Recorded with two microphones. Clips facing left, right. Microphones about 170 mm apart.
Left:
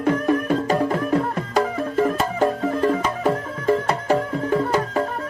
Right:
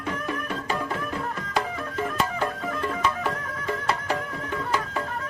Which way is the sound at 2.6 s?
30° left (ahead or behind).